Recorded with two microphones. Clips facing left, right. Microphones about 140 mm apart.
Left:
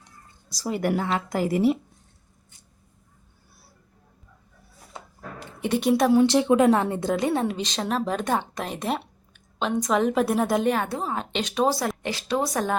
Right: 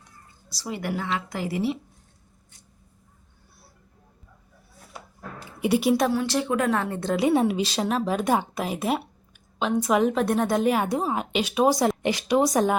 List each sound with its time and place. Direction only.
0.5 s a woman's voice: 45° left (ahead or behind)
5.5 s a woman's voice: 10° right (ahead or behind)
6.1 s speech: 20° left (ahead or behind)
7.1 s a woman's voice: 5° right (ahead or behind)
10.8 s a woman's voice: 15° right (ahead or behind)